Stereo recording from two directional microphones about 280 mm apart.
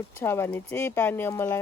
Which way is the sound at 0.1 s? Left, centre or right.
Centre.